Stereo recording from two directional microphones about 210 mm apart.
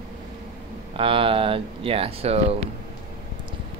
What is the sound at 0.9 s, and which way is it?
Speech, 25° right (ahead or behind).